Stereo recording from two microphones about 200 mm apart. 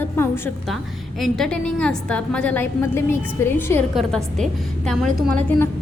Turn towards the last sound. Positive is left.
turn(degrees=0)  # may be behind; listen again after turning